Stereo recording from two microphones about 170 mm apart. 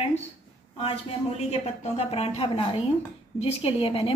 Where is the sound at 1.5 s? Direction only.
35° left (ahead or behind).